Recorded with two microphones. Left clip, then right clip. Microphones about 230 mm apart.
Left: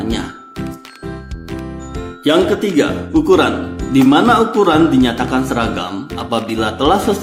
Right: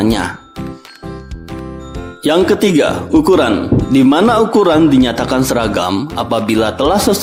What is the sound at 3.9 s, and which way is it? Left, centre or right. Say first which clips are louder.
Speech: even; right.